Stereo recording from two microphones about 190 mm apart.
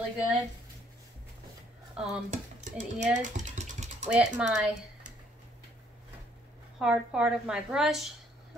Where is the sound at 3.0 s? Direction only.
40° right (ahead or behind).